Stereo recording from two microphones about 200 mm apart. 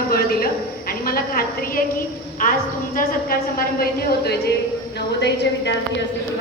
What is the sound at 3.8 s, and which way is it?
A man's voice, 55° left (ahead or behind).